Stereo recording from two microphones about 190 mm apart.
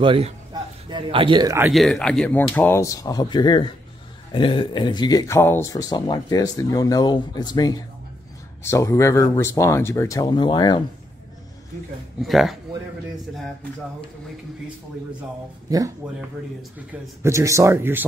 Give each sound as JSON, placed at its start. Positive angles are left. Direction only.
{"t": 0.0, "sound": "speech", "side_deg": -30}
{"t": 1.7, "sound": "speech", "side_deg": 0}
{"t": 12.2, "sound": "speech", "side_deg": 0}
{"t": 16.7, "sound": "speech", "side_deg": -15}